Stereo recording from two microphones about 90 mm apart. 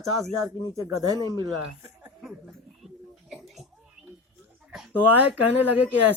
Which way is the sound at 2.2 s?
5° right (ahead or behind).